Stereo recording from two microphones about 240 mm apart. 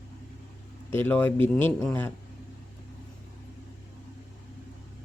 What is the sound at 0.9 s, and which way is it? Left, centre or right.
Speech, centre.